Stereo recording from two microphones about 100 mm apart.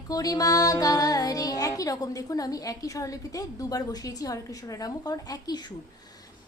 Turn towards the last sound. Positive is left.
turn(degrees=40)  # may be behind; listen again after turning